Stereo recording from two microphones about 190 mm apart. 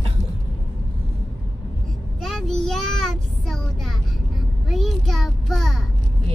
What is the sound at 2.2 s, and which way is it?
Child singing, centre (ahead or behind).